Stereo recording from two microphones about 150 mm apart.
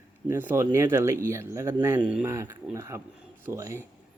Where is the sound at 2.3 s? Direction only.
20° right (ahead or behind).